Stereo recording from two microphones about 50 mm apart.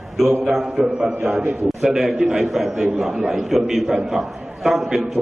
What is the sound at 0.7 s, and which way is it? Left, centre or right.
A man's voice, centre.